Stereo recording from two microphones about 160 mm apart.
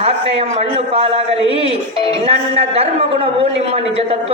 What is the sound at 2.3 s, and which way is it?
Speech, 40° right (ahead or behind).